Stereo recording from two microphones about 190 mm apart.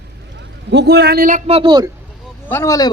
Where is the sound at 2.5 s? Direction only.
15° left (ahead or behind).